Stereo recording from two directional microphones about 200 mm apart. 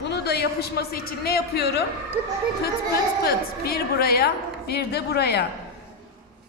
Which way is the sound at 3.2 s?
50° left (ahead or behind).